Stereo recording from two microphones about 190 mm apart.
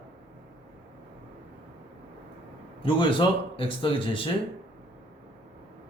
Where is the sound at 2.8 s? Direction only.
25° left (ahead or behind).